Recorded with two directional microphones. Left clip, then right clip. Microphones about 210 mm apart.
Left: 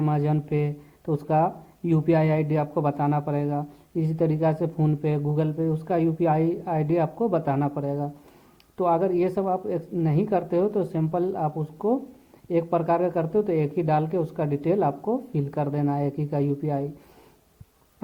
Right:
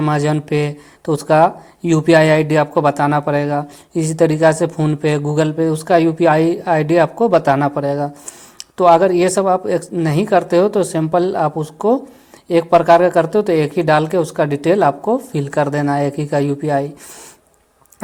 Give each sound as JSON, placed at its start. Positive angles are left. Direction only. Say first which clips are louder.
{"t": 0.0, "sound": "speech", "louder": "right 9 dB", "side_deg": -15}